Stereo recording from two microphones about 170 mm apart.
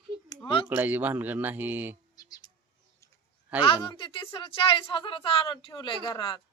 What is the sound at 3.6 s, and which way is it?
A woman's voice, 30° left (ahead or behind).